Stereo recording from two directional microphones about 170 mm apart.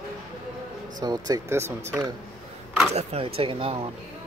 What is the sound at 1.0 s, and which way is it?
Speech, 25° right (ahead or behind).